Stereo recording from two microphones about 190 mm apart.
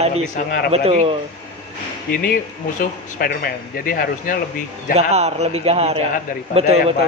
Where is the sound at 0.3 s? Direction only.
55° left (ahead or behind).